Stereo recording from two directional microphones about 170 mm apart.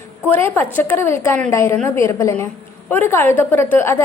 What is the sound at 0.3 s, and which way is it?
A woman's voice, 15° left (ahead or behind).